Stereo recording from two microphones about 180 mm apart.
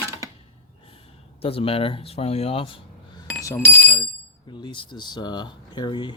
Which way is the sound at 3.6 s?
10° left (ahead or behind).